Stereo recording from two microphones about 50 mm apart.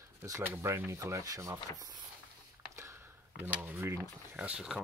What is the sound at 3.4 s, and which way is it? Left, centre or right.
Speech, right.